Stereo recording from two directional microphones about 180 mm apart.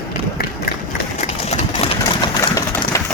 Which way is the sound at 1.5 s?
35° left (ahead or behind).